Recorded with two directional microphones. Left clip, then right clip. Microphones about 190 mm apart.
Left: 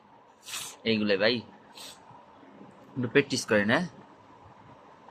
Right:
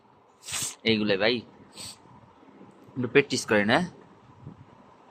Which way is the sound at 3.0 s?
20° right (ahead or behind).